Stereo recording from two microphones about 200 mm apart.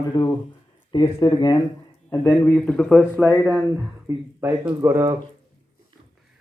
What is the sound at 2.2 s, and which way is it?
Speech, 5° left (ahead or behind).